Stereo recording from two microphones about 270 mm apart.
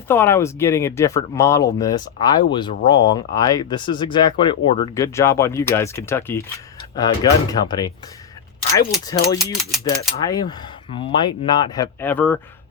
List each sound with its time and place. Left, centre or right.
0.1 s speech: centre
9.4 s speech: centre
10.2 s speech: centre